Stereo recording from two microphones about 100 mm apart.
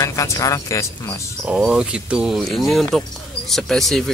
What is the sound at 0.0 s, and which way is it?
Speech, 35° left (ahead or behind).